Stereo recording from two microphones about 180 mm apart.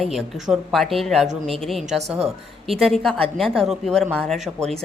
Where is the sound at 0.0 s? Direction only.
Centre (ahead or behind).